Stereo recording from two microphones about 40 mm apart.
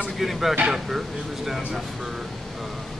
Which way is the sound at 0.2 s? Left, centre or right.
Centre.